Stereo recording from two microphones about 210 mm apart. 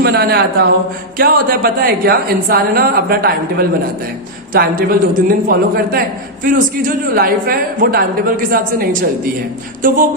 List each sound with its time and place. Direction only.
0.0 s a man's voice: 50° right (ahead or behind)